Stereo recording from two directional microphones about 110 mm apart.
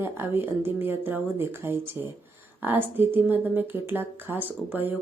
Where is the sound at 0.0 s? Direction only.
20° right (ahead or behind).